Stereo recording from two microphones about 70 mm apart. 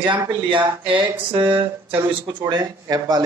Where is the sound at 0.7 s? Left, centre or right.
Right.